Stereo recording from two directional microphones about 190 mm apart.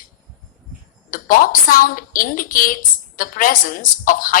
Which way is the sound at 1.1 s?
45° left (ahead or behind).